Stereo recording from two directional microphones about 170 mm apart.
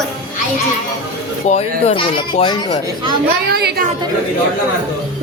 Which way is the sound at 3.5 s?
65° right (ahead or behind).